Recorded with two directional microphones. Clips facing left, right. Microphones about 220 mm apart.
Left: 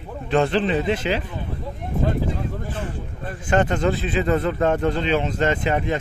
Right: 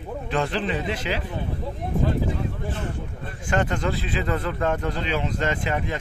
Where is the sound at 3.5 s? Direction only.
25° left (ahead or behind).